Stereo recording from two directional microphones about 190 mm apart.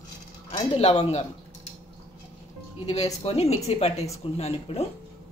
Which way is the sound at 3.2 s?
30° left (ahead or behind).